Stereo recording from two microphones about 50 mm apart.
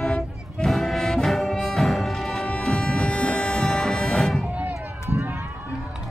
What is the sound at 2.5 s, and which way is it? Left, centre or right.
Music, centre.